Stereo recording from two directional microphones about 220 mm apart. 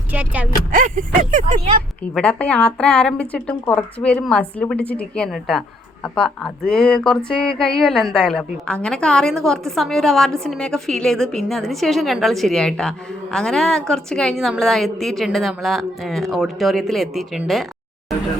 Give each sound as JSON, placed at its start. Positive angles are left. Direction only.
{"t": 0.1, "sound": "speech", "side_deg": -5}
{"t": 0.7, "sound": "speech", "side_deg": -35}
{"t": 2.1, "sound": "a woman's voice", "side_deg": 5}